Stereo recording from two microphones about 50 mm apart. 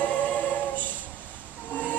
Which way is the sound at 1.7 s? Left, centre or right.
Left.